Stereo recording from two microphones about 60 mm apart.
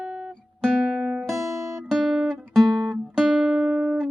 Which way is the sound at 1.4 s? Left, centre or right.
Right.